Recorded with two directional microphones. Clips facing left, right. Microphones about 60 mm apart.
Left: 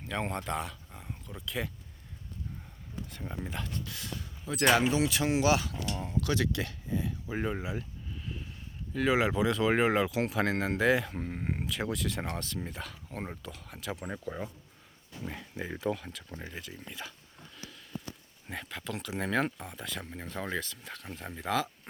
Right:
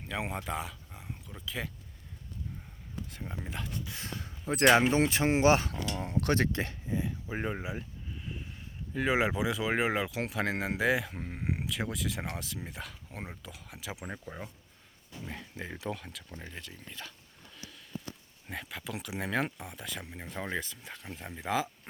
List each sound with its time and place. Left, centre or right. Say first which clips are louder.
0.0 s speech: left 2 dB; centre
3.1 s speech: left 3 dB; centre
3.8 s speech: even; right
6.0 s speech: right 2 dB; right; by 17.2 s centre
18.4 s speech: left 1 dB; centre